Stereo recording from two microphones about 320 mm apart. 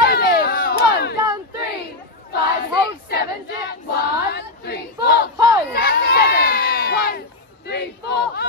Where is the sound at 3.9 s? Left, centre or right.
Left.